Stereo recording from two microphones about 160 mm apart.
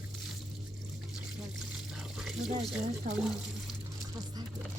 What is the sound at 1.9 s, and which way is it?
Water, centre (ahead or behind).